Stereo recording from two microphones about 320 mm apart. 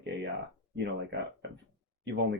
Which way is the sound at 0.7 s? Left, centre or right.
Right.